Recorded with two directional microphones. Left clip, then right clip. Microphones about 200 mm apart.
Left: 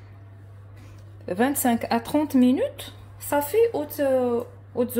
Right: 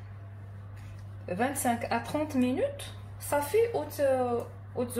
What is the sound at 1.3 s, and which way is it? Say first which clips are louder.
Speech: left 6 dB; 60° left (ahead or behind).